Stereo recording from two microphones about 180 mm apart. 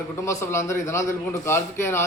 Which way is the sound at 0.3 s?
15° left (ahead or behind).